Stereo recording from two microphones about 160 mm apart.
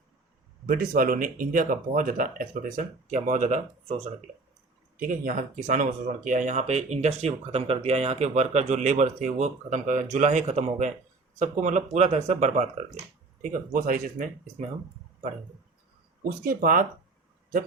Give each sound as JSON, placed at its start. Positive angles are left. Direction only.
{"t": 0.7, "sound": "speech", "side_deg": -60}
{"t": 4.9, "sound": "speech", "side_deg": -60}
{"t": 16.4, "sound": "speech", "side_deg": -65}